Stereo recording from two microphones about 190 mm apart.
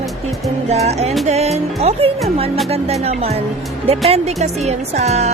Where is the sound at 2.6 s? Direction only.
30° right (ahead or behind).